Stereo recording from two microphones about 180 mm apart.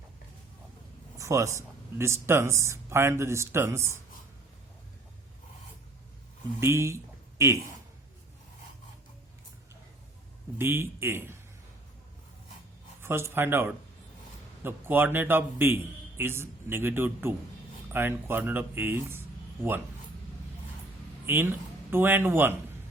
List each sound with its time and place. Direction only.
1.2 s a man's voice: 15° right (ahead or behind)
6.6 s speech: 15° right (ahead or behind)
10.6 s a man's voice: 15° right (ahead or behind)
13.0 s a man's voice: 15° right (ahead or behind)
21.3 s a man's voice: 15° right (ahead or behind)